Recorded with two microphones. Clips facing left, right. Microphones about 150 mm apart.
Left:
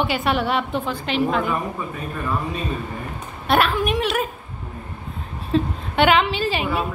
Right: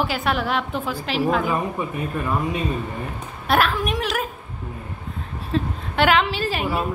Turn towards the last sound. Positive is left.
turn(degrees=0)  # may be behind; listen again after turning